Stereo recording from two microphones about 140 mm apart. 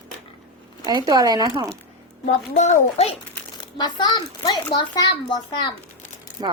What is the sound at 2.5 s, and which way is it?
Speech, 55° left (ahead or behind).